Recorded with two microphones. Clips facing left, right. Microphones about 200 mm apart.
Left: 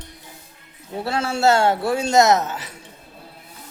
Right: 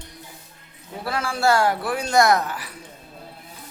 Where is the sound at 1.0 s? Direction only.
25° left (ahead or behind).